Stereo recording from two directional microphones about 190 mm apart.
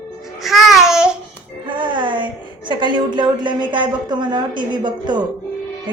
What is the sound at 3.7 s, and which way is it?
A woman's voice, 25° right (ahead or behind).